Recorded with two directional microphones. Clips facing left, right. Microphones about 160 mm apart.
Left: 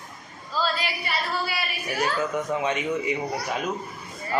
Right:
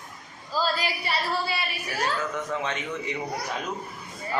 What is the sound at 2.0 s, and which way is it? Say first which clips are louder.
A man's voice: left 3 dB; 10° left (ahead or behind).